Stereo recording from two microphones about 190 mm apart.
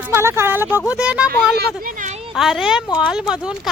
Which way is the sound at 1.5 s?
45° right (ahead or behind).